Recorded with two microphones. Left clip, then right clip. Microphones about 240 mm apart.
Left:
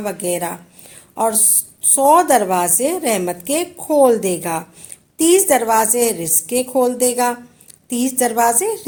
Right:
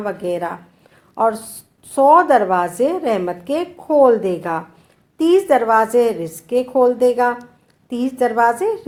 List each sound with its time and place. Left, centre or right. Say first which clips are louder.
0.0 s a woman's voice: even; left